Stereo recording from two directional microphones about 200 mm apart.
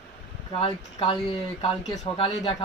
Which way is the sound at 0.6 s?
25° left (ahead or behind).